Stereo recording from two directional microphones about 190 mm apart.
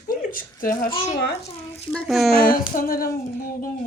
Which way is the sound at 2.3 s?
50° left (ahead or behind).